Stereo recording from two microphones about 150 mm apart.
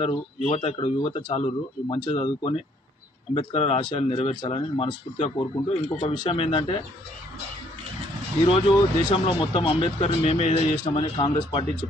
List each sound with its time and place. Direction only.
0.0 s speech: 30° left (ahead or behind)
8.5 s speech: 35° left (ahead or behind)